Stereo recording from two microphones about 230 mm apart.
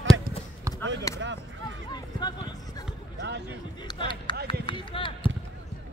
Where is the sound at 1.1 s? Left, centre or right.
Centre.